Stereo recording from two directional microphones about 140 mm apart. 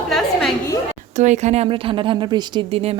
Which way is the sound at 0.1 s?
Centre (ahead or behind).